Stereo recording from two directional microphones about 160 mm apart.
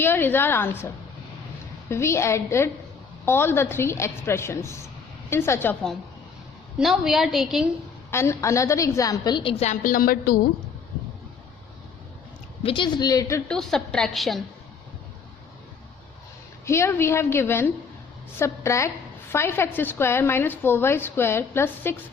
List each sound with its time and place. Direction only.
0.0 s a woman's voice: 15° left (ahead or behind)
1.9 s a woman's voice: 15° left (ahead or behind)
6.7 s a woman's voice: 5° right (ahead or behind)
8.1 s a woman's voice: 15° left (ahead or behind); by 9.7 s 40° left (ahead or behind)
9.8 s a woman's voice: 65° left (ahead or behind)
12.6 s a woman's voice: 30° left (ahead or behind)
13.5 s a woman's voice: 5° left (ahead or behind)
16.6 s a woman's voice: 15° left (ahead or behind)